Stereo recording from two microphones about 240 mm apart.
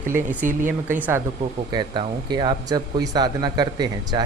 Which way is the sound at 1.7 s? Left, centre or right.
Centre.